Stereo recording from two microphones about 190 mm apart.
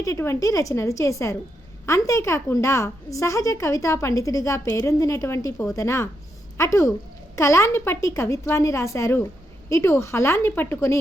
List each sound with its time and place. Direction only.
0.0 s a woman's voice: 15° left (ahead or behind)